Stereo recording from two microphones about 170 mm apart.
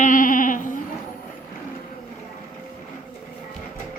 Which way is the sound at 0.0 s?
50° left (ahead or behind).